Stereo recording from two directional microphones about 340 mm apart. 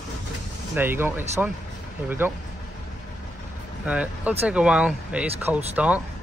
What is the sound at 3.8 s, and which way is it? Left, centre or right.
Speech, centre.